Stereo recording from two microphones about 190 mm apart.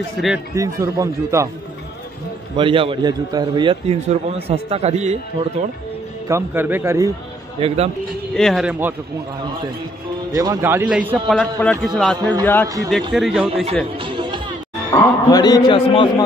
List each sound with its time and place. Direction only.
0.6 s speech: 15° right (ahead or behind)
2.5 s a man's voice: 30° right (ahead or behind)
6.2 s speech: 15° right (ahead or behind)
7.6 s a man's voice: 35° right (ahead or behind)
8.4 s a man's voice: centre (ahead or behind)
10.3 s speech: 20° right (ahead or behind)
11.2 s a man's voice: 5° left (ahead or behind)
12.2 s a man's voice: 20° right (ahead or behind)
13.1 s a man's voice: centre (ahead or behind)
13.9 s music: 25° right (ahead or behind)
14.9 s a man's voice: 20° left (ahead or behind)